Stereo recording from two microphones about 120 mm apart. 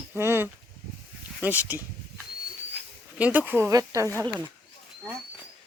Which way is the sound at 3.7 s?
30° right (ahead or behind).